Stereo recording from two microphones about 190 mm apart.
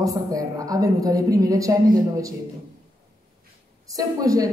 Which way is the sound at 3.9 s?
20° right (ahead or behind).